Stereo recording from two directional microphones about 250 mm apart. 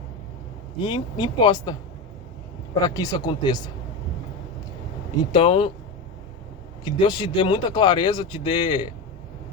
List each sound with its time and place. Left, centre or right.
0.8 s speech: centre
2.8 s speech: centre
5.3 s speech: left
6.8 s speech: centre